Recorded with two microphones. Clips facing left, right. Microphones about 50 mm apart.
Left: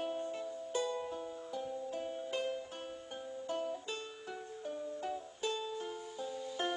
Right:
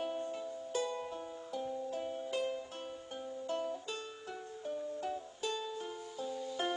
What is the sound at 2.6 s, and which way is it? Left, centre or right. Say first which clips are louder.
Music: even; centre.